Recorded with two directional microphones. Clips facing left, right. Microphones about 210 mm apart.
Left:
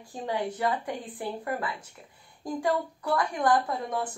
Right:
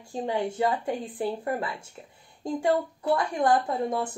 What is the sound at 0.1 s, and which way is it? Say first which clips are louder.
A woman's voice: right 3 dB; 25° right (ahead or behind).